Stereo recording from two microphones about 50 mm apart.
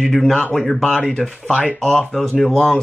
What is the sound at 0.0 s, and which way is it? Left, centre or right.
Speech, centre.